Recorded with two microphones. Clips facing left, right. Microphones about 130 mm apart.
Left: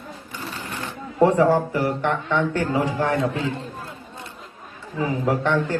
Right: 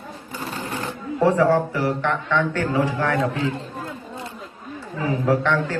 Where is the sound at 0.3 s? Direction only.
35° right (ahead or behind).